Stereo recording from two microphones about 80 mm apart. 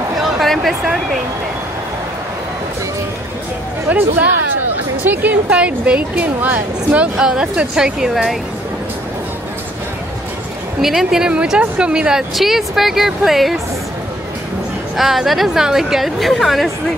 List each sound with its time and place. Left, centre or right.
0.2 s a sound: centre
3.9 s speech: centre
7.2 s speech: centre
10.8 s speech: centre
15.0 s speech: centre